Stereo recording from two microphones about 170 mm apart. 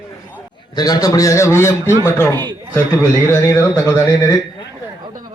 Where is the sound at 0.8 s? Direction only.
20° left (ahead or behind).